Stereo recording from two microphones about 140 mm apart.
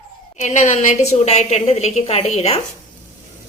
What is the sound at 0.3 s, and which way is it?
A woman's voice, 55° left (ahead or behind).